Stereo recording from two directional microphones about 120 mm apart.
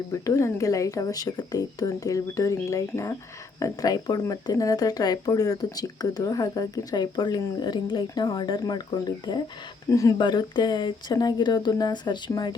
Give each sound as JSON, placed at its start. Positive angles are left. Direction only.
{"t": 0.1, "sound": "speech", "side_deg": 25}
{"t": 10.2, "sound": "speech", "side_deg": 40}